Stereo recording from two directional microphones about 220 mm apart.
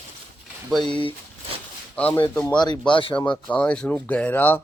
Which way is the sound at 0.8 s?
20° left (ahead or behind).